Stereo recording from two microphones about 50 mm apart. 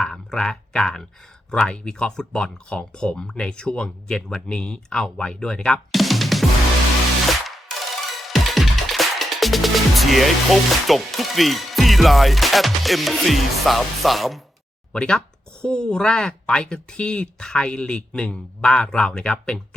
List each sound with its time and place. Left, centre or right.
0.0 s speech: centre
4.4 s speech: left
5.9 s music: centre
8.2 s music: centre
14.9 s speech: centre